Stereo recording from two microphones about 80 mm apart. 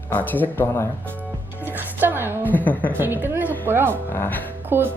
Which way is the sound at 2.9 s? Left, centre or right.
Right.